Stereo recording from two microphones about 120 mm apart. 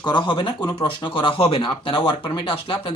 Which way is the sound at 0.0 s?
40° left (ahead or behind).